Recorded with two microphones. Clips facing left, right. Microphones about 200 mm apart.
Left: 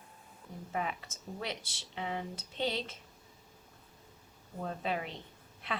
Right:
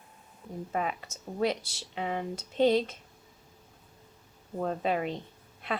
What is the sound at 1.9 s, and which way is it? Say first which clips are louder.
Speech: right 5 dB; 55° right (ahead or behind).